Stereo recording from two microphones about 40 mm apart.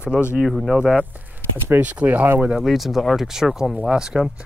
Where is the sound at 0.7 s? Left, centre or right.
Right.